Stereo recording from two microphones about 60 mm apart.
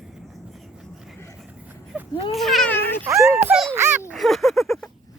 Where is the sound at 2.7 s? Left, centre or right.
Left.